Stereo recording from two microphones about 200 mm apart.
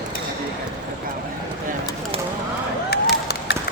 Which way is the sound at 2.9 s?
55° left (ahead or behind).